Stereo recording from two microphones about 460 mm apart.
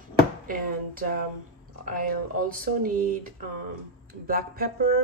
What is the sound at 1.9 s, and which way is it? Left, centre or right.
Speech, centre.